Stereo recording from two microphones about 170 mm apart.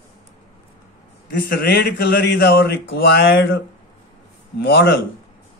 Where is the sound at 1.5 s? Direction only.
65° left (ahead or behind); by 3.6 s 85° left.